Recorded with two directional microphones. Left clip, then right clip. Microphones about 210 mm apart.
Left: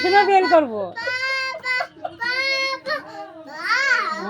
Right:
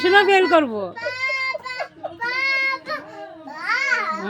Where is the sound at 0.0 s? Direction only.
20° right (ahead or behind).